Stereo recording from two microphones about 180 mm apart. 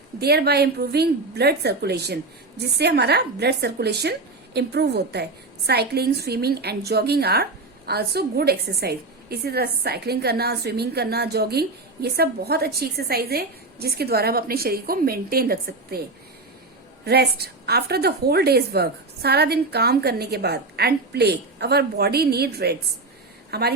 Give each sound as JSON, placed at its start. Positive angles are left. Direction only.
{"t": 0.2, "sound": "a woman's voice", "side_deg": -60}
{"t": 17.1, "sound": "a woman's voice", "side_deg": -65}